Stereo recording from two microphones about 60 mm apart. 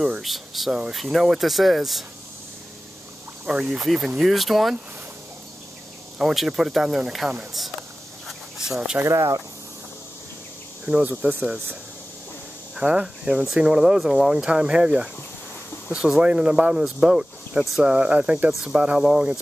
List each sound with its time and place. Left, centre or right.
0.2 s speech: centre
3.4 s speech: centre
6.1 s speech: centre
8.6 s speech: centre
9.0 s speech: right
10.9 s speech: right
12.7 s speech: centre
16.2 s speech: centre
18.5 s speech: centre